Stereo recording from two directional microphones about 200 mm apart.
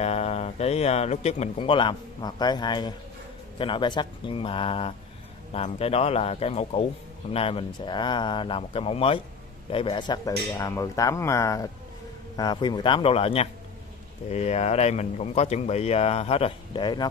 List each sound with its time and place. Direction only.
0.0 s speech: 30° left (ahead or behind)